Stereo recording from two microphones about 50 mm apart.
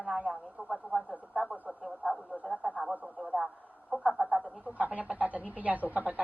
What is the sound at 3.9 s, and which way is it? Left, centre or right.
A woman's voice, right.